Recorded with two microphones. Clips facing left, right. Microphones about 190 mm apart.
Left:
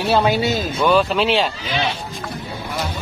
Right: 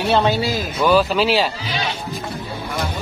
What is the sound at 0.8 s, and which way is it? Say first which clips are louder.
Speech: right 1 dB; 5° right (ahead or behind).